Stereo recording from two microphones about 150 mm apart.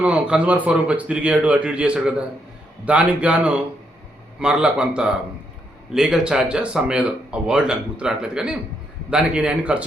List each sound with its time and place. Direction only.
0.0 s speech: 10° right (ahead or behind)